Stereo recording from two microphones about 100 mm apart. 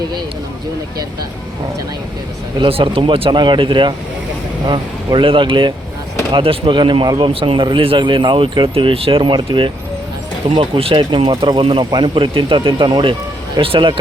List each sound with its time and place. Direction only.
2.6 s speech: 60° right (ahead or behind)